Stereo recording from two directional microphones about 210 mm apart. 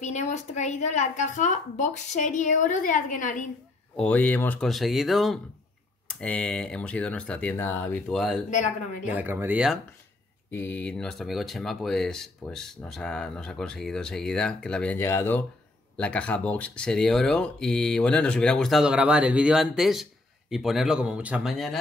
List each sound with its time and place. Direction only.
0.0 s speech: 35° left (ahead or behind)
3.9 s speech: 5° left (ahead or behind)
8.5 s speech: 35° left (ahead or behind)
9.1 s speech: 10° right (ahead or behind)
10.5 s speech: 10° left (ahead or behind)